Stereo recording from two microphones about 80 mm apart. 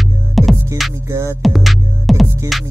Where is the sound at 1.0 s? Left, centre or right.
Right.